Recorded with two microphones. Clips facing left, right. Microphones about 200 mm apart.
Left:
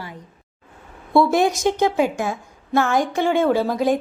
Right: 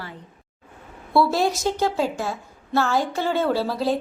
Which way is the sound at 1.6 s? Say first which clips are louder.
Left 4 dB; 20° left (ahead or behind).